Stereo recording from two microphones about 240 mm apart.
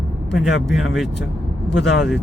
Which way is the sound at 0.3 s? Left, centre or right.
Centre.